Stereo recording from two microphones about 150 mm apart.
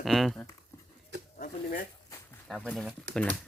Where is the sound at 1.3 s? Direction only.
70° left (ahead or behind).